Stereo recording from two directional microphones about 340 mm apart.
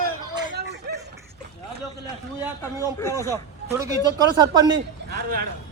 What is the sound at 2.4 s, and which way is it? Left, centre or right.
Speech, centre.